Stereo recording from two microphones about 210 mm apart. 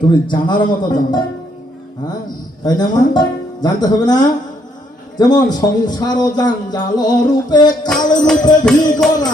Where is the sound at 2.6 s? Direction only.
20° left (ahead or behind).